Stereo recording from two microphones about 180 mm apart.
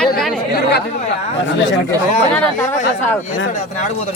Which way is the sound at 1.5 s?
80° left.